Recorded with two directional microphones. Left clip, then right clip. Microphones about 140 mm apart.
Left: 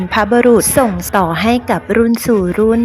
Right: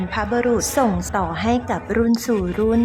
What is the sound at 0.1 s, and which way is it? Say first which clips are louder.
Speech: left 10 dB; 40° left (ahead or behind).